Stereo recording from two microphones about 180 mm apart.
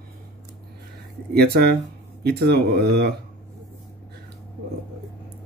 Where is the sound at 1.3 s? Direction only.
65° right (ahead or behind).